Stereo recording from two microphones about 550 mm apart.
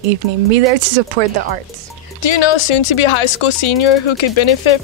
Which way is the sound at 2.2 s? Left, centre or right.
Left.